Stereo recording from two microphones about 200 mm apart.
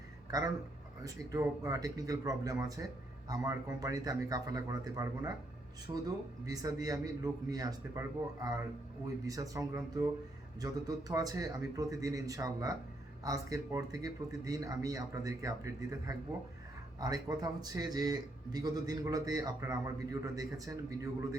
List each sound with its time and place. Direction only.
0.3 s a man's voice: 20° right (ahead or behind)